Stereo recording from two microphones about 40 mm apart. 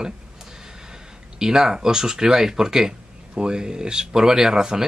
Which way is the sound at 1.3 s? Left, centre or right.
Centre.